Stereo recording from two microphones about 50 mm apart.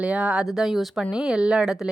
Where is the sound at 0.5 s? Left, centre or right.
Centre.